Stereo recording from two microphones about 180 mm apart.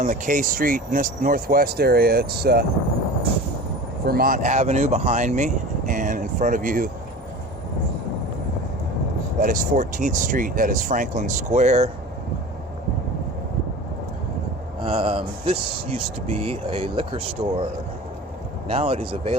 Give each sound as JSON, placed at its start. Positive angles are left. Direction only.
{"t": 0.0, "sound": "speech", "side_deg": -45}
{"t": 4.0, "sound": "speech", "side_deg": -55}
{"t": 9.4, "sound": "speech", "side_deg": -50}
{"t": 14.8, "sound": "speech", "side_deg": -30}
{"t": 18.7, "sound": "speech", "side_deg": -35}